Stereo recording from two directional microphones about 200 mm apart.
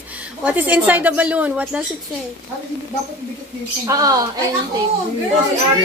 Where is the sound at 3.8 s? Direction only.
20° right (ahead or behind).